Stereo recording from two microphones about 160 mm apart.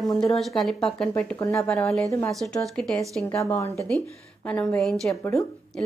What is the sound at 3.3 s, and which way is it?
A woman's voice, 15° left (ahead or behind).